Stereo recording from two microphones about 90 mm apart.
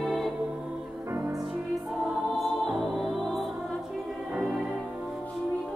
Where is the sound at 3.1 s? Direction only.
5° left (ahead or behind).